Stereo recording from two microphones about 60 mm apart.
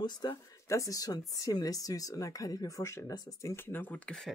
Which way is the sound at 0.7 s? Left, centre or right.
Left.